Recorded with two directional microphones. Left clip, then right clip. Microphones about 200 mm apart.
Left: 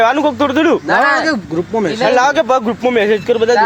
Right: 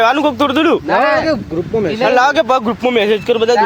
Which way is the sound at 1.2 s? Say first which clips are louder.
Even; 45° left (ahead or behind).